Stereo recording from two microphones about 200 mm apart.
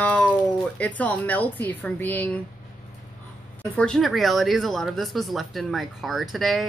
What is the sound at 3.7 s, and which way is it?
Speech, 5° left (ahead or behind).